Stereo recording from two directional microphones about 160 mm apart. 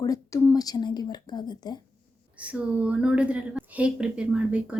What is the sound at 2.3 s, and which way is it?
A woman's voice, 10° right (ahead or behind).